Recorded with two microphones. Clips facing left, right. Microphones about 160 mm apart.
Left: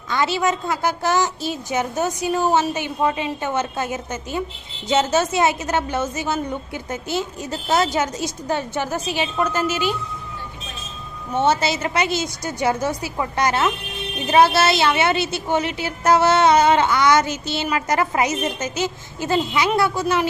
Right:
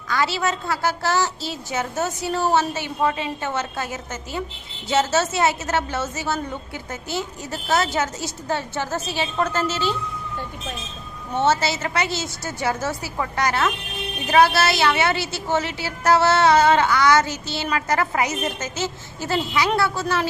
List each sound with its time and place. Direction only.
0.1 s a woman's voice: 20° left (ahead or behind)
11.4 s a woman's voice: 20° left (ahead or behind)